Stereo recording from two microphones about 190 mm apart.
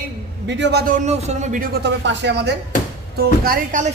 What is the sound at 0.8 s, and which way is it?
Speech, 40° right (ahead or behind).